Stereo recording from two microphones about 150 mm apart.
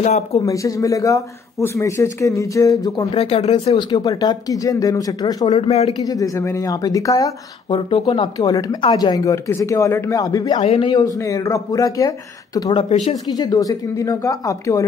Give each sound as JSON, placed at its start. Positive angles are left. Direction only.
{"t": 0.0, "sound": "speech", "side_deg": 50}
{"t": 0.5, "sound": "speech", "side_deg": 20}
{"t": 3.2, "sound": "speech", "side_deg": 40}
{"t": 3.7, "sound": "speech", "side_deg": 25}
{"t": 5.5, "sound": "speech", "side_deg": 45}
{"t": 5.9, "sound": "speech", "side_deg": 25}
{"t": 7.7, "sound": "speech", "side_deg": 35}